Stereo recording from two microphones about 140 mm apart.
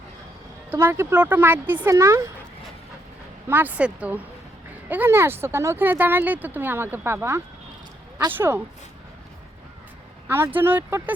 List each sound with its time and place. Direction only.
0.7 s speech: 15° right (ahead or behind)
3.5 s speech: 10° right (ahead or behind)
10.2 s speech: 15° right (ahead or behind)